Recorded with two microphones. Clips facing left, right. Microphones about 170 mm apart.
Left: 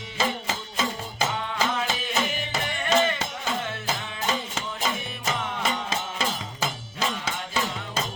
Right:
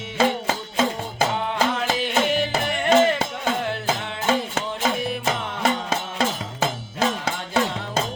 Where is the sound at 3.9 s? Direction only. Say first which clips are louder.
Right 6 dB; 65° right (ahead or behind).